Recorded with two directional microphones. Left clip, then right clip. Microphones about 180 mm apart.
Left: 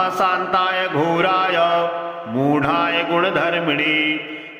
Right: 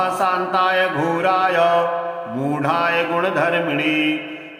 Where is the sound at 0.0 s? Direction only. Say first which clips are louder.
Left 1 dB; 15° left (ahead or behind).